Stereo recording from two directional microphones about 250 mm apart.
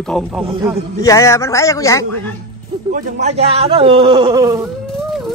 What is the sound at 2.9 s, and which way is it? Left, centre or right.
Speech, right.